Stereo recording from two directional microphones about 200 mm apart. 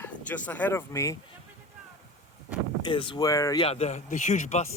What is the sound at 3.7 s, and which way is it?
Speech, 35° left (ahead or behind).